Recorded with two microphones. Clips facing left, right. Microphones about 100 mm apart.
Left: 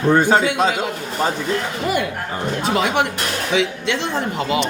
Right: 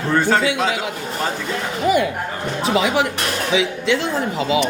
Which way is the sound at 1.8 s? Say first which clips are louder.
Right 7 dB; centre (ahead or behind).